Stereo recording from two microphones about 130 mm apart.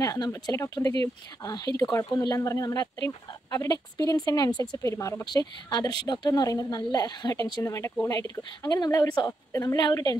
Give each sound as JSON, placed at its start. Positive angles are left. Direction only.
{"t": 0.0, "sound": "speech", "side_deg": 25}